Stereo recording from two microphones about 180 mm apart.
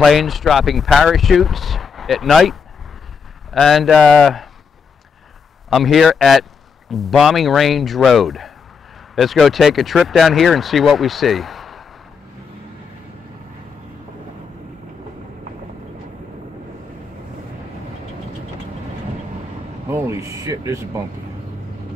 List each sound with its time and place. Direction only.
0.0 s speech: centre (ahead or behind)
3.5 s speech: centre (ahead or behind)
5.7 s speech: centre (ahead or behind)
19.9 s speech: 15° right (ahead or behind)